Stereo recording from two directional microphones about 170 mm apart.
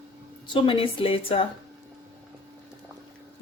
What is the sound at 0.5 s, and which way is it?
Speech, 30° left (ahead or behind).